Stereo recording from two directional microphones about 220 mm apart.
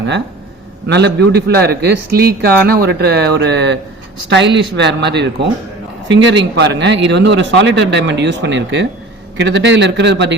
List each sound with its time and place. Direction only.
0.9 s a man's voice: 50° right (ahead or behind)